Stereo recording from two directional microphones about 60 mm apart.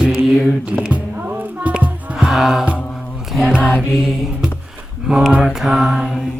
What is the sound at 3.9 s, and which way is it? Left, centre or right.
Mantra, centre.